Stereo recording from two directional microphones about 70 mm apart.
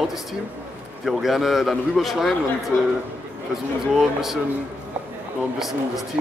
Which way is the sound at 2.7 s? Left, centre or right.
Left.